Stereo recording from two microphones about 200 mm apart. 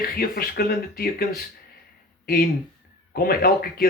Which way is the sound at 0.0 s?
50° left (ahead or behind).